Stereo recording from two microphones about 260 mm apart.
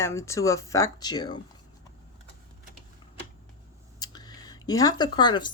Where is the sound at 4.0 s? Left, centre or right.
Centre.